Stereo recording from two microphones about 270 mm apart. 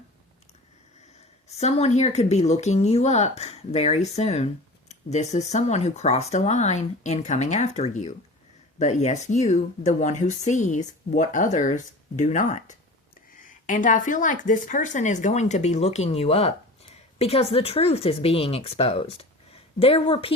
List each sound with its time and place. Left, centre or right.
1.5 s speech: left